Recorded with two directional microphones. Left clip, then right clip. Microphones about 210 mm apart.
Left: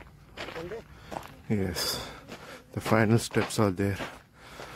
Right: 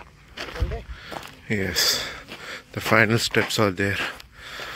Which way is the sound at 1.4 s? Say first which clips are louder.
Right 9 dB; 5° left (ahead or behind).